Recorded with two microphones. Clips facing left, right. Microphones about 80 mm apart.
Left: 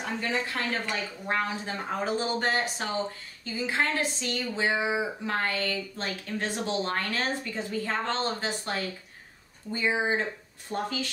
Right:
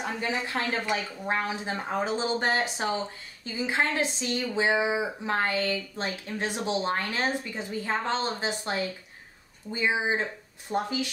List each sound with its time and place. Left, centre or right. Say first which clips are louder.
0.2 s speech: even; centre